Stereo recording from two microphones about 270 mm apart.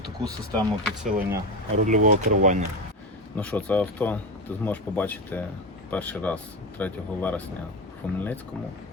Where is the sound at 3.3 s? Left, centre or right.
Centre.